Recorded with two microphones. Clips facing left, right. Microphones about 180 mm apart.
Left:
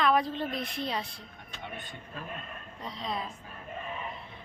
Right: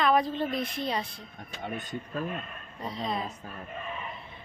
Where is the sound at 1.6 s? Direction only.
40° right (ahead or behind).